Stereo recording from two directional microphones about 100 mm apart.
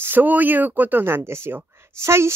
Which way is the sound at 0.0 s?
20° right (ahead or behind).